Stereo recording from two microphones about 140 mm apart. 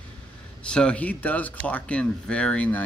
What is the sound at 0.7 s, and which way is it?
Speech, 5° left (ahead or behind).